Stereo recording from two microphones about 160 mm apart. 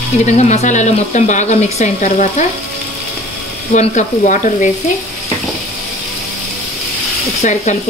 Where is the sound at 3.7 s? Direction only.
50° left (ahead or behind).